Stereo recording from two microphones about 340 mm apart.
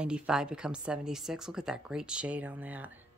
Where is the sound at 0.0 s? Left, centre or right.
Centre.